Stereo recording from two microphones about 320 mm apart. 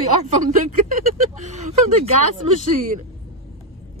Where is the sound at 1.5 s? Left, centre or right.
Right.